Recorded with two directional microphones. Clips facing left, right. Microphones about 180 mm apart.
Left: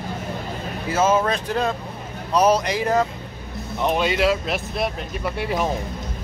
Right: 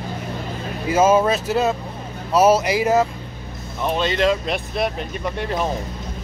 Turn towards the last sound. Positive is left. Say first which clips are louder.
# even
turn(degrees=10)  # may be behind; listen again after turning